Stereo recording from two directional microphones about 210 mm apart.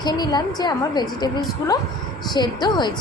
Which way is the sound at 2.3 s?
20° left (ahead or behind).